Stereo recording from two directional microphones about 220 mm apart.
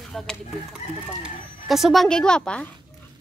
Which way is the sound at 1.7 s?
Centre (ahead or behind).